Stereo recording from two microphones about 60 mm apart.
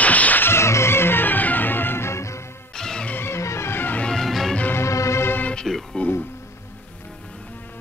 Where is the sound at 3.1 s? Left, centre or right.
Left.